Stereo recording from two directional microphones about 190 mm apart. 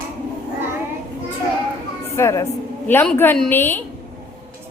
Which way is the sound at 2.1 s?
15° left (ahead or behind).